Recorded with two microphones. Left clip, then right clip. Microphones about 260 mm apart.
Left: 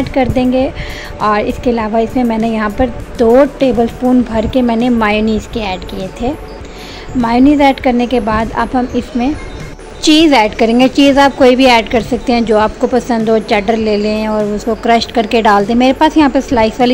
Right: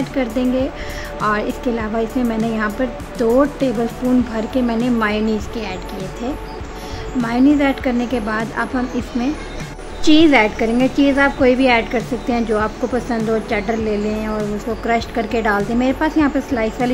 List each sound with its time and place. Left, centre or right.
0.0 s speech: centre